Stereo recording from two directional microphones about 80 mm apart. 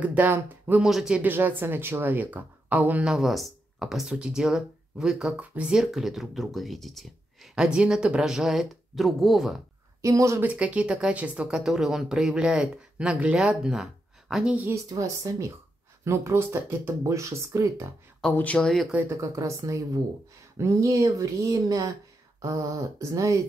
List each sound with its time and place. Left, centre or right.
0.0 s speech: right
0.8 s speech: centre
1.1 s speech: right
3.1 s speech: centre
5.8 s speech: centre
7.5 s speech: centre
10.0 s speech: right
10.4 s speech: centre
11.4 s speech: centre
14.9 s speech: right
18.3 s speech: centre
19.0 s speech: right